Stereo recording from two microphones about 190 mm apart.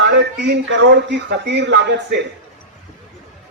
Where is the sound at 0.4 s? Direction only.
70° right (ahead or behind).